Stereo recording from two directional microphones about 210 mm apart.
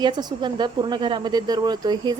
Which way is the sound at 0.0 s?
20° right (ahead or behind).